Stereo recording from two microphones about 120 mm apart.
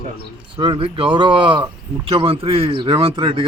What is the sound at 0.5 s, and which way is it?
Speech, 45° right (ahead or behind).